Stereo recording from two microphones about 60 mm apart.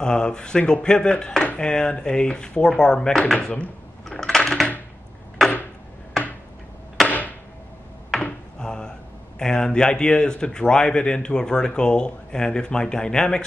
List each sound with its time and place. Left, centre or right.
0.0 s speech: centre
3.3 s speech: centre
4.0 s coin: centre
7.1 s a sound: left
8.2 s a sound: centre
9.4 s speech: centre